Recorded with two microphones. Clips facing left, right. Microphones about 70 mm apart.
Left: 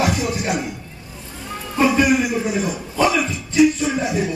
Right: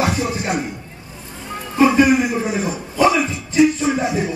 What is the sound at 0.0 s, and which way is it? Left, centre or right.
Music, right.